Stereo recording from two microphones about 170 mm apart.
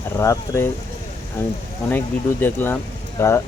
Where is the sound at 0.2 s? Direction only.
15° left (ahead or behind).